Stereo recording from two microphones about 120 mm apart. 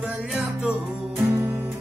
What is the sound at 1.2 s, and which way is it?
Music, 15° right (ahead or behind).